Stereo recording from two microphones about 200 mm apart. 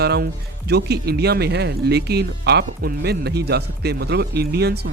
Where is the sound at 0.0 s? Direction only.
55° right (ahead or behind).